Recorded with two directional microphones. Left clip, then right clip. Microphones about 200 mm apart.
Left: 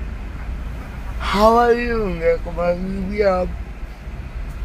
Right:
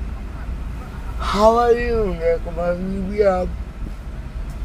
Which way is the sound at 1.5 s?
20° left (ahead or behind).